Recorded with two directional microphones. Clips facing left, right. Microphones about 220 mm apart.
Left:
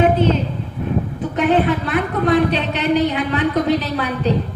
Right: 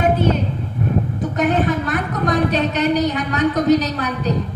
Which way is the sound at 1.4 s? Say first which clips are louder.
Left 2 dB; 45° right (ahead or behind).